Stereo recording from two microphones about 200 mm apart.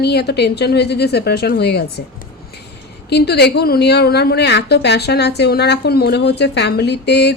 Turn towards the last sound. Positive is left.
turn(degrees=55)  # may be behind; listen again after turning